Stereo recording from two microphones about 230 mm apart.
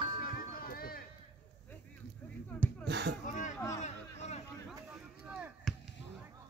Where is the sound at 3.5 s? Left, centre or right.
Centre.